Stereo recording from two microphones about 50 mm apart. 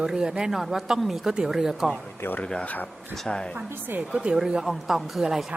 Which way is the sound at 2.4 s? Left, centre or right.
Centre.